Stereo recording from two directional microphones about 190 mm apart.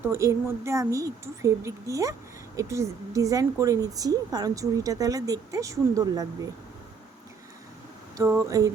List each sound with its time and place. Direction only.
0.0 s speech: 15° right (ahead or behind)
8.2 s speech: 15° right (ahead or behind)